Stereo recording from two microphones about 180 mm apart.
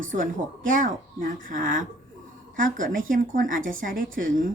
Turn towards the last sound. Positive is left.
turn(degrees=-50)  # may be behind; listen again after turning